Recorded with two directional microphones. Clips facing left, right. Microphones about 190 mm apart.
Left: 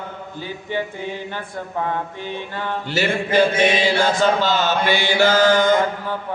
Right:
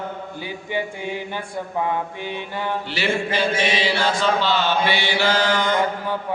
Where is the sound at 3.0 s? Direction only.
45° left (ahead or behind).